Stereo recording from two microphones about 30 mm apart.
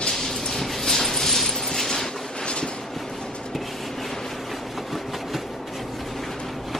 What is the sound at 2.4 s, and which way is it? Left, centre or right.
Train, left.